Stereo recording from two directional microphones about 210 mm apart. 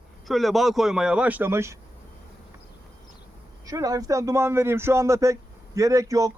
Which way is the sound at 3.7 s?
15° right (ahead or behind).